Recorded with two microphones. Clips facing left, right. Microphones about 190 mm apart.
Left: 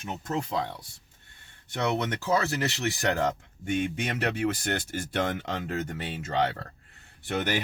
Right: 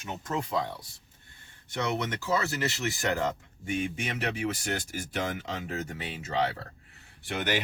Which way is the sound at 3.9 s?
65° left (ahead or behind).